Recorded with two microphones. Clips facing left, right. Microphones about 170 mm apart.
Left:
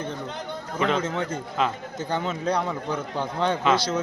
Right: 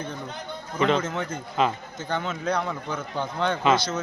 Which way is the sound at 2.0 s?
35° left (ahead or behind).